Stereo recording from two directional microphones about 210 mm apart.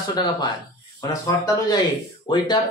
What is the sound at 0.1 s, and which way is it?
A man's voice, 20° left (ahead or behind).